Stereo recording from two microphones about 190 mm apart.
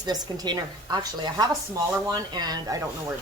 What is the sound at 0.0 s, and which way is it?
Speech, 20° right (ahead or behind).